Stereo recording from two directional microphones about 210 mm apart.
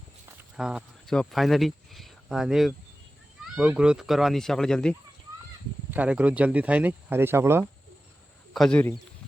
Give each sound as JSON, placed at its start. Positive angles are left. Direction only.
{"t": 0.5, "sound": "speech", "side_deg": -5}
{"t": 8.5, "sound": "speech", "side_deg": 5}